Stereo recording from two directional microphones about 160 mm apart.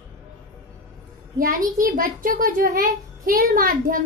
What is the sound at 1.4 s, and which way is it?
A child's voice, 65° right (ahead or behind).